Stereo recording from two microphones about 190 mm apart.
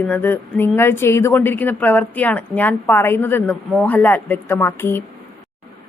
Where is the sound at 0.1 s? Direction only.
10° left (ahead or behind).